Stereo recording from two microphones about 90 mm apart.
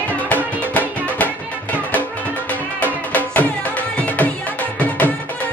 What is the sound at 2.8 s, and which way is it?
Music, 20° left (ahead or behind).